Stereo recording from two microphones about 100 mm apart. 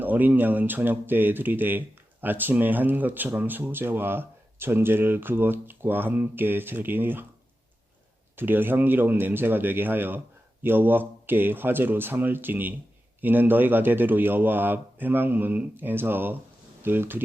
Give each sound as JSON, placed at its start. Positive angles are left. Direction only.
{"t": 0.0, "sound": "speech", "side_deg": -20}
{"t": 8.4, "sound": "speech", "side_deg": -20}